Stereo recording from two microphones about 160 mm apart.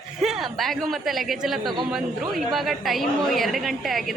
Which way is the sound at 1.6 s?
30° right (ahead or behind).